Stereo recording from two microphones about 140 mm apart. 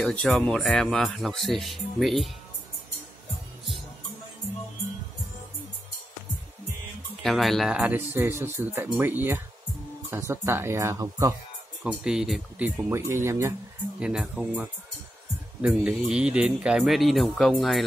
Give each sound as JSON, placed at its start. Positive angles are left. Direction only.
{"t": 0.0, "sound": "speech", "side_deg": 5}
{"t": 7.2, "sound": "speech", "side_deg": 0}
{"t": 7.7, "sound": "speech", "side_deg": -10}
{"t": 11.8, "sound": "speech", "side_deg": -5}
{"t": 13.9, "sound": "speech", "side_deg": -5}